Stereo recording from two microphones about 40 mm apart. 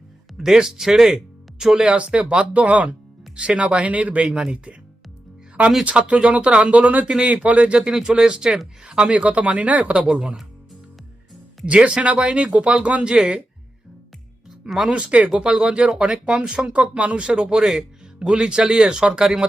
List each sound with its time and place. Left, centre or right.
0.3 s speech: centre
1.8 s speech: right
3.3 s speech: right
5.8 s speech: right
7.1 s speech: right
7.4 s speech: right
7.8 s speech: centre
9.2 s speech: right
11.6 s speech: right
14.6 s speech: right
16.7 s speech: right; by 17.8 s centre
18.2 s speech: right
19.2 s speech: centre